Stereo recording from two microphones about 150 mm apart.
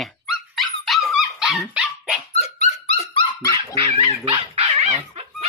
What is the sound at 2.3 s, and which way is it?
Dog, 45° left (ahead or behind).